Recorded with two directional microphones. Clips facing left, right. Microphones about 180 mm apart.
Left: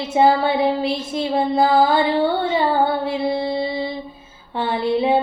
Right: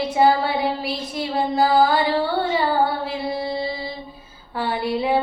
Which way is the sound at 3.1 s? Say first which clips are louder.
Left 4 dB; 25° left (ahead or behind).